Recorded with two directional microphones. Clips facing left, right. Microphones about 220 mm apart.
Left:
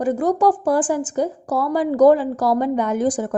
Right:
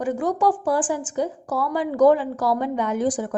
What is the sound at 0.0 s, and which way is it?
A woman's voice, 40° left (ahead or behind).